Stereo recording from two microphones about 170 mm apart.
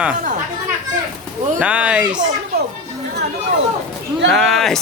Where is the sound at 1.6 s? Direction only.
10° right (ahead or behind).